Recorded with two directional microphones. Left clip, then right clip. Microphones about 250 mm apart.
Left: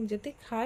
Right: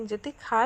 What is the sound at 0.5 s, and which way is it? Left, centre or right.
Speech, right.